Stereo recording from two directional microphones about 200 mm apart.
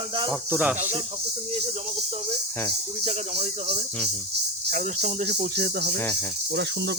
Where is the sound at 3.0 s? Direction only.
30° right (ahead or behind).